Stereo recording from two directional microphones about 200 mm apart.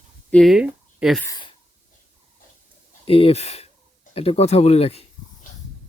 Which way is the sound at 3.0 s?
30° left (ahead or behind).